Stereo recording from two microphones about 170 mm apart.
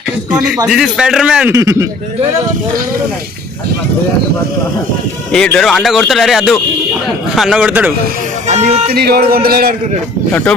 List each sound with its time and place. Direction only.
0.7 s speech: 5° right (ahead or behind)
1.5 s a man's voice: 15° right (ahead or behind)
5.3 s a man's voice: 5° left (ahead or behind)
8.4 s speech: 45° right (ahead or behind)
8.9 s speech: 65° right (ahead or behind)